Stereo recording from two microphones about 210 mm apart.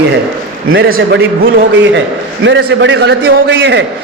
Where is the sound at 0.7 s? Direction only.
45° right (ahead or behind).